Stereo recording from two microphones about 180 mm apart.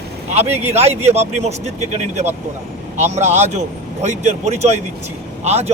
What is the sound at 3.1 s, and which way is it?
Speech, 40° right (ahead or behind).